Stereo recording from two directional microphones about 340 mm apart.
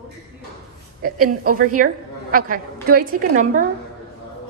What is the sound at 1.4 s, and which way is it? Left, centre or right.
A woman's voice, right.